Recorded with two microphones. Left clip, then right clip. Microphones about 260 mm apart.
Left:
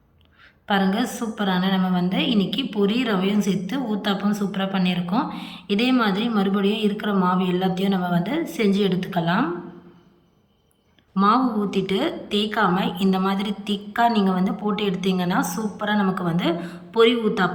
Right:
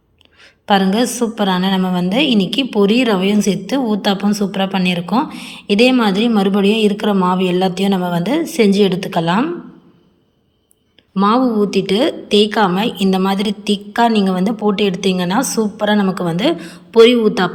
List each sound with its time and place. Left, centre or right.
0.7 s a woman's voice: centre
11.1 s a woman's voice: centre